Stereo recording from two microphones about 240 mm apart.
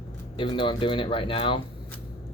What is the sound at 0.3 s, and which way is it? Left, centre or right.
Speech, left.